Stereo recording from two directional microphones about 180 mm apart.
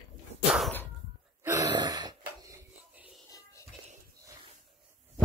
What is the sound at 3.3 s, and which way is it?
Music, 20° left (ahead or behind).